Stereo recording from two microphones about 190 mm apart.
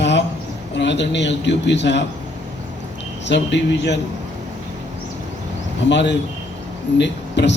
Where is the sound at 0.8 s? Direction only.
70° left (ahead or behind).